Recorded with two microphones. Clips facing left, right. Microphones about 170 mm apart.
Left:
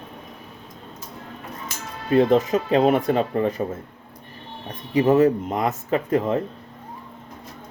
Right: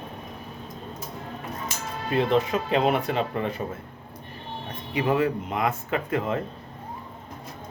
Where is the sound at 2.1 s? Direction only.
45° left (ahead or behind).